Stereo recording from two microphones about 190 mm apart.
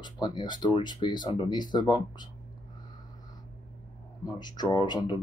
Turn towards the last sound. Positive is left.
turn(degrees=25)  # may be behind; listen again after turning